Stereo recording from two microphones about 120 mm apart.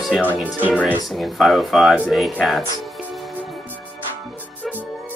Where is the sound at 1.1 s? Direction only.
Centre (ahead or behind).